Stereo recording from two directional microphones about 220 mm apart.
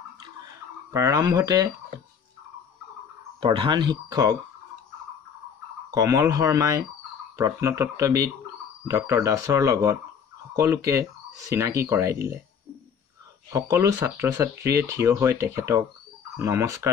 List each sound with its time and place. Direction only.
0.9 s speech: 15° right (ahead or behind)
3.3 s speech: 25° right (ahead or behind)
5.9 s speech: 15° right (ahead or behind)
13.5 s speech: 15° right (ahead or behind)